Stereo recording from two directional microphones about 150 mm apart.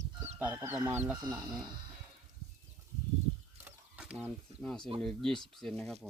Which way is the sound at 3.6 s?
10° right (ahead or behind).